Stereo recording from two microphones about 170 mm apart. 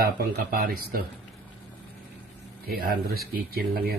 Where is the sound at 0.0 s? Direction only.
65° right (ahead or behind).